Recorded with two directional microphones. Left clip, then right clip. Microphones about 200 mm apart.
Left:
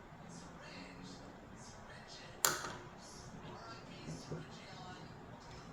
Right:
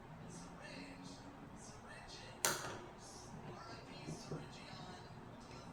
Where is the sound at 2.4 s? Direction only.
20° left (ahead or behind).